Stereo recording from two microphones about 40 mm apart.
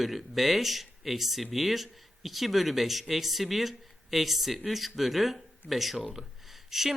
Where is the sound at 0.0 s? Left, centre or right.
Centre.